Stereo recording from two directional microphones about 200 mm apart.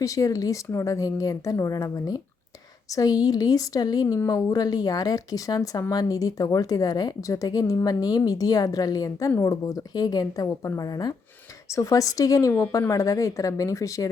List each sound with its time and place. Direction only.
0.0 s speech: 15° left (ahead or behind)